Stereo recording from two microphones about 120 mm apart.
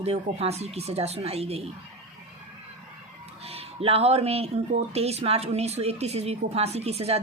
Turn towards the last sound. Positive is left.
turn(degrees=-60)  # may be behind; listen again after turning